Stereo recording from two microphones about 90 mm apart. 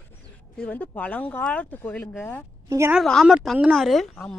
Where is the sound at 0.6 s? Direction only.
20° left (ahead or behind).